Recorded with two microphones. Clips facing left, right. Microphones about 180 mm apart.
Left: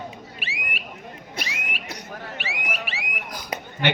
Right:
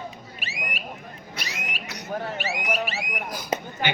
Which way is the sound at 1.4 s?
50° left (ahead or behind).